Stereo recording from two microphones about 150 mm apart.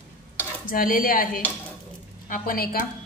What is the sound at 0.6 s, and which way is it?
Speech, 70° left (ahead or behind).